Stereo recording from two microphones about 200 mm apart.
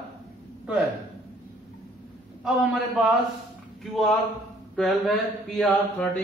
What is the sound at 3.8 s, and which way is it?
Speech, centre (ahead or behind).